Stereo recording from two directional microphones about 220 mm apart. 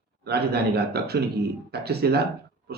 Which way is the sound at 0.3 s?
45° right (ahead or behind).